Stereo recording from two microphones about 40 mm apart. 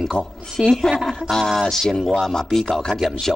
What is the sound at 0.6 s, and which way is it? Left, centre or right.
Speech, centre.